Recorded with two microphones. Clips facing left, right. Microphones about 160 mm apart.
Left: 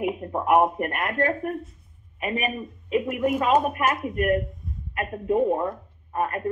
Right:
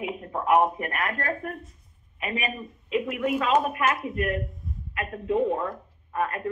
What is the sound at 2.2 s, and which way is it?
Speech, 35° left (ahead or behind).